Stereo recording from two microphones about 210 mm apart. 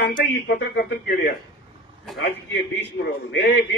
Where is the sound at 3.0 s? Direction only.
55° left (ahead or behind).